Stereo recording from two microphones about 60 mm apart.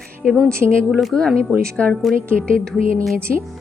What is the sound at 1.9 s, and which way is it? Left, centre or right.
A woman's voice, centre.